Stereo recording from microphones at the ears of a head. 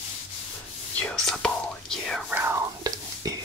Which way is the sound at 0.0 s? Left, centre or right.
Left.